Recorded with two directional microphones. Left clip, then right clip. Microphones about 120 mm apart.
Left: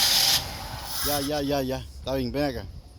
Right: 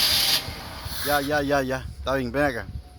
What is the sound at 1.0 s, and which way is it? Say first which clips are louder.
Speech: right 5 dB; 30° left (ahead or behind).